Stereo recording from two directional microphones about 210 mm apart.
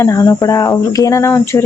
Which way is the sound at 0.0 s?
15° left (ahead or behind).